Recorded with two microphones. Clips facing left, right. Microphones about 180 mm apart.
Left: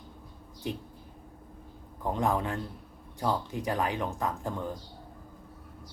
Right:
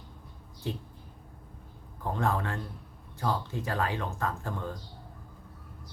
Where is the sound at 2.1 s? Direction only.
15° left (ahead or behind).